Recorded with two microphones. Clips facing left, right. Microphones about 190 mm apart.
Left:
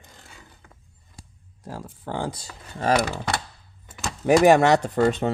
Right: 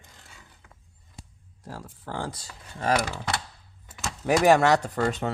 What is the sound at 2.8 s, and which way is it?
Speech, 30° left (ahead or behind).